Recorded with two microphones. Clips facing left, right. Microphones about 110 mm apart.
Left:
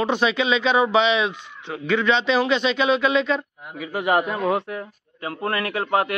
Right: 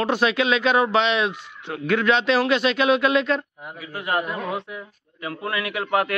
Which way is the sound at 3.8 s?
70° left (ahead or behind).